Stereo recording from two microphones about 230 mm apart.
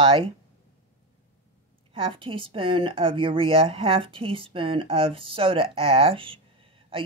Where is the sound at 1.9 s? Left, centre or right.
Right.